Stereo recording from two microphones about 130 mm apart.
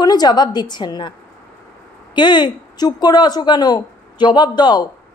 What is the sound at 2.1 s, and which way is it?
A woman's voice, 35° left (ahead or behind).